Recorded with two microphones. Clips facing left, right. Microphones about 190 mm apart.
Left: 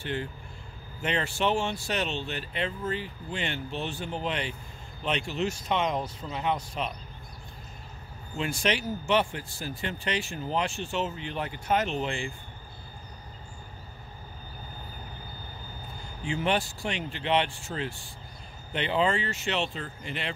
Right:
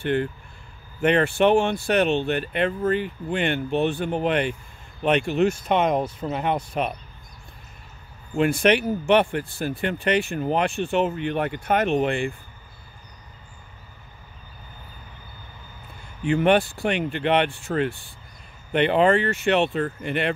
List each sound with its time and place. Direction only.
0.0 s speech: 60° right (ahead or behind)
8.4 s speech: 60° right (ahead or behind)
16.3 s speech: 60° right (ahead or behind)